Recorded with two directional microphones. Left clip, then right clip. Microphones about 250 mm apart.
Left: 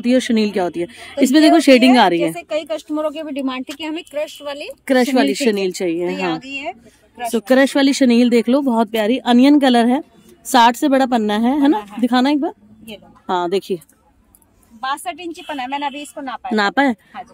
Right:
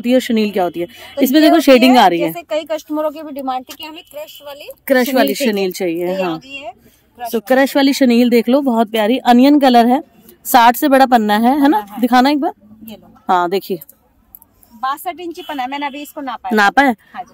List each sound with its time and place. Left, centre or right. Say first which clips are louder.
0.0 s a woman's voice: right 2 dB; centre
4.2 s speech: left 5 dB; right
4.8 s speech: right 2 dB; centre
6.3 s speech: left 2 dB; right
7.2 s a woman's voice: right 1 dB; centre
14.8 s a woman's voice: right 3 dB; centre